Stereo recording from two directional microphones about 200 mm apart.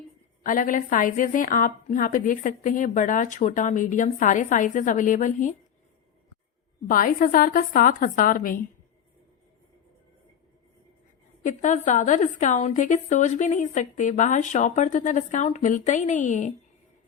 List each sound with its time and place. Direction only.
0.4 s a woman's voice: 40° left (ahead or behind)
6.8 s a woman's voice: 40° left (ahead or behind)
11.4 s a woman's voice: 40° left (ahead or behind)